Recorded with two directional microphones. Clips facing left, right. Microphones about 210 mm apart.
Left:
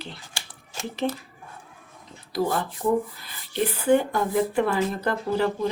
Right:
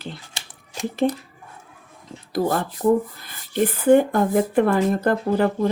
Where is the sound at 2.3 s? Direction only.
45° right (ahead or behind).